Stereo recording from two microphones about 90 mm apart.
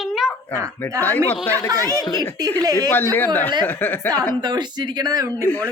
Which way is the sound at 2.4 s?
45° right (ahead or behind).